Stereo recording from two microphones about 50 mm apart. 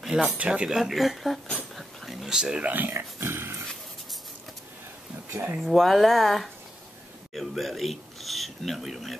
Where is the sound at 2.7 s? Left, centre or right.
Right.